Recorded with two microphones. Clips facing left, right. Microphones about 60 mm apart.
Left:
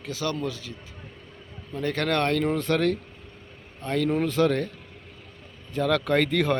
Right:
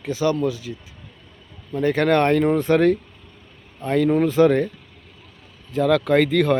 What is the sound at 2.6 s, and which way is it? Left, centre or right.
Speech, centre.